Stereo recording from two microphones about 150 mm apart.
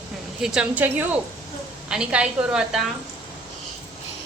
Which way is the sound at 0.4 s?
5° right (ahead or behind).